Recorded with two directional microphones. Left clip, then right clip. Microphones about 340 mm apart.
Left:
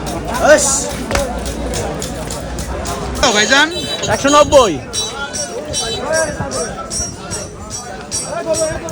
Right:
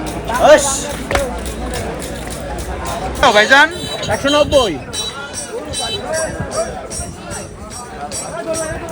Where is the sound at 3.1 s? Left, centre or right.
Centre.